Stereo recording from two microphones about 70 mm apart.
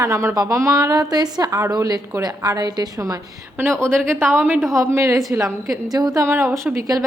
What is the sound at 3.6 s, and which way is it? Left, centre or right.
A woman's voice, right.